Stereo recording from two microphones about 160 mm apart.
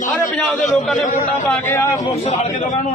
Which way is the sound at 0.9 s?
50° left (ahead or behind).